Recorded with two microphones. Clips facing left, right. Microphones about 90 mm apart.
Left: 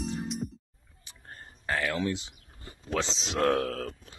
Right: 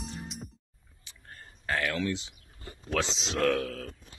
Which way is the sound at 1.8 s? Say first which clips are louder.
Left 2 dB; 25° left (ahead or behind).